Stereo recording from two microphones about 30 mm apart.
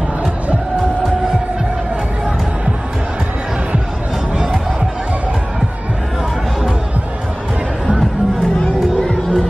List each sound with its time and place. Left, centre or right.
9.0 s music: left